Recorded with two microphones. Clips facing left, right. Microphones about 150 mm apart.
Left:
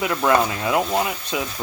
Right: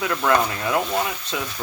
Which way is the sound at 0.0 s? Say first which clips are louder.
Left 2 dB; 20° left (ahead or behind).